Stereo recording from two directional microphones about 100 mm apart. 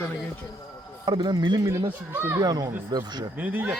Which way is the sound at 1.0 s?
50° right (ahead or behind).